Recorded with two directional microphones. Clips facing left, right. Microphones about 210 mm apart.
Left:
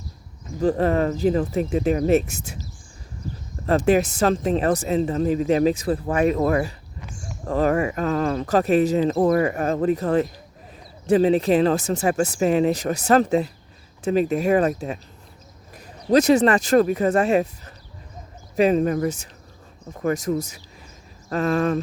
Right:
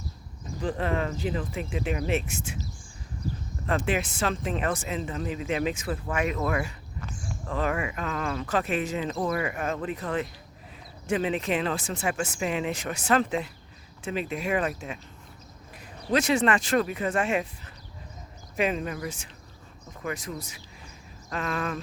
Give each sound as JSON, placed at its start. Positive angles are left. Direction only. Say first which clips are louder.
{"t": 0.6, "sound": "speech", "louder": "left 9 dB", "side_deg": 40}
{"t": 3.7, "sound": "speech", "louder": "left 9 dB", "side_deg": 40}
{"t": 18.5, "sound": "speech", "louder": "left 10 dB", "side_deg": 40}